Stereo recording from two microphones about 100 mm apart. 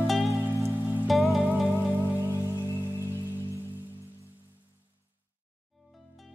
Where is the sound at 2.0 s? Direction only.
25° left (ahead or behind).